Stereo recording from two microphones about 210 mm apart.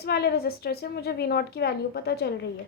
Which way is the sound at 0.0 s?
50° left (ahead or behind).